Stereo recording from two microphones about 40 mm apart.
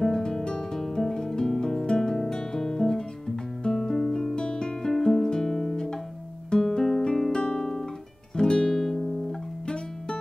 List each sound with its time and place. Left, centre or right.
0.0 s music: centre
0.7 s guitar: centre
4.4 s music: centre
6.5 s guitar: centre
7.2 s music: centre
7.4 s guitar: centre